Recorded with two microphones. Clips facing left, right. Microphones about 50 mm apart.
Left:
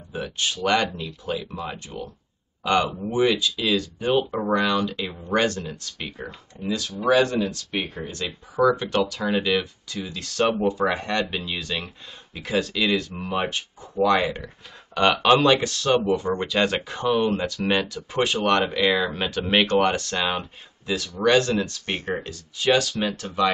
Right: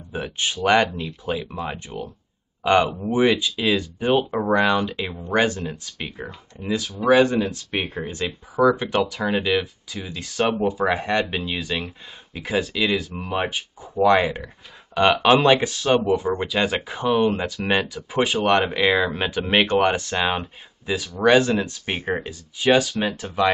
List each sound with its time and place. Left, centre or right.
0.1 s speech: right